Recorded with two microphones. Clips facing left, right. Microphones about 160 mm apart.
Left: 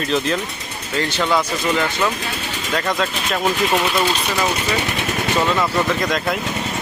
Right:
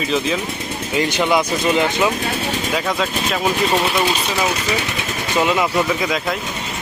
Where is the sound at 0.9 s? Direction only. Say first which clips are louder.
Right 2 dB; 15° right (ahead or behind).